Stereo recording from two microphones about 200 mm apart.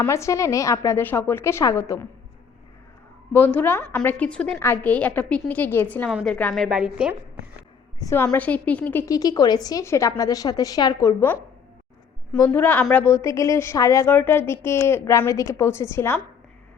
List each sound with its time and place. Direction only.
0.0 s a woman's voice: 15° left (ahead or behind)
3.3 s a woman's voice: 10° left (ahead or behind)
7.9 s a woman's voice: 15° left (ahead or behind)